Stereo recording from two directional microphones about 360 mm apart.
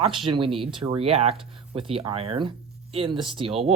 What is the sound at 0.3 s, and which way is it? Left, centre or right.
Speech, centre.